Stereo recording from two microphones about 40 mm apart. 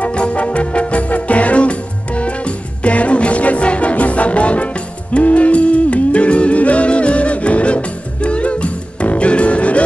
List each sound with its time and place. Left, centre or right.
0.0 s music: left